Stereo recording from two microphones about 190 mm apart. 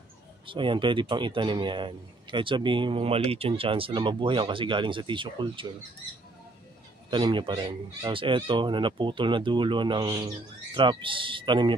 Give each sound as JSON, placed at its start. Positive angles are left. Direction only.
{"t": 0.5, "sound": "speech", "side_deg": -25}
{"t": 7.1, "sound": "speech", "side_deg": -25}